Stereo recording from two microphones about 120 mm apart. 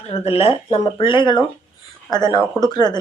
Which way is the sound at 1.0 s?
40° left (ahead or behind).